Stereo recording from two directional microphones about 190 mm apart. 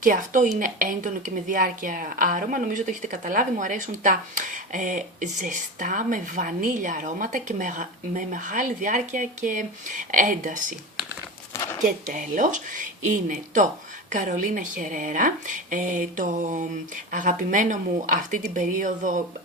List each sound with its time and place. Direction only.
0.0 s speech: 45° right (ahead or behind)
11.5 s a sound: 15° left (ahead or behind)
11.9 s speech: 45° right (ahead or behind)